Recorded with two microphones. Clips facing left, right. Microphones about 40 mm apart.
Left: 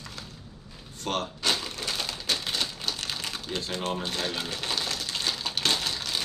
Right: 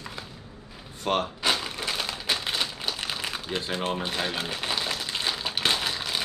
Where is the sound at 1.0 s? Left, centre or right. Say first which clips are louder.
Right 3 dB; centre.